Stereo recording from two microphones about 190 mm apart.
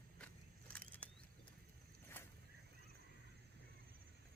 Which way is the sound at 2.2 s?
10° left (ahead or behind).